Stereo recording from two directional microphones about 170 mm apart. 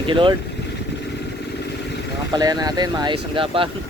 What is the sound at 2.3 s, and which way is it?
Speech, 25° right (ahead or behind).